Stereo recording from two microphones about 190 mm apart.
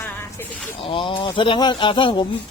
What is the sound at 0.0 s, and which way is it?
Snake, 10° left (ahead or behind).